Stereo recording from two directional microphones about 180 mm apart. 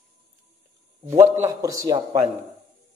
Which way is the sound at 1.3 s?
20° right (ahead or behind).